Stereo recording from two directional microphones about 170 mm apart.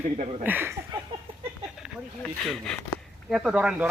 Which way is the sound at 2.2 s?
5° left (ahead or behind).